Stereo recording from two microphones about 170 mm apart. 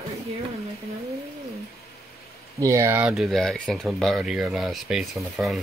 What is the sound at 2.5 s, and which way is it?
Speech, 20° right (ahead or behind).